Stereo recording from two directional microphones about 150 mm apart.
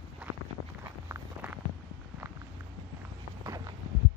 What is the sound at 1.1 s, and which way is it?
Walk, 10° right (ahead or behind).